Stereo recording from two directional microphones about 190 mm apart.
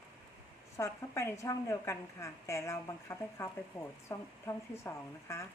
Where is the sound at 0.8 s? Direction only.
15° left (ahead or behind).